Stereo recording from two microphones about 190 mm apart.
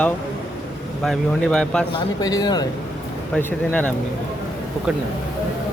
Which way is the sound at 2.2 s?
20° left (ahead or behind).